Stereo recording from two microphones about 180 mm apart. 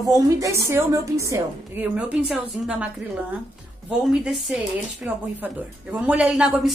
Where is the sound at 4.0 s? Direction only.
5° right (ahead or behind).